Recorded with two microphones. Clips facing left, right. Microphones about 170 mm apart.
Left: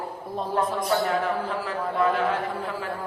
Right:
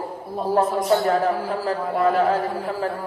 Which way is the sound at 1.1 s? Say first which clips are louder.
Right 4 dB; 40° right (ahead or behind).